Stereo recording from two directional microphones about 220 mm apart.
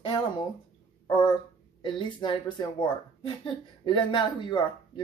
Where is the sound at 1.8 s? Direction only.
20° left (ahead or behind).